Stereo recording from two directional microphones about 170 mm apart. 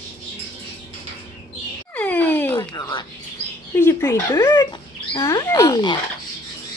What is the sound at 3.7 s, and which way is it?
Speech, 15° left (ahead or behind).